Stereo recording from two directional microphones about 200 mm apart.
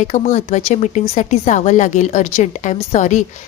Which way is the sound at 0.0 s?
35° left (ahead or behind).